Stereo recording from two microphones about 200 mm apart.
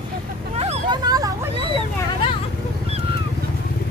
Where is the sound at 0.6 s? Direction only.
30° right (ahead or behind).